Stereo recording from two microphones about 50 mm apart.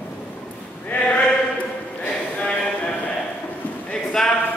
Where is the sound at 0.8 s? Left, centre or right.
Left.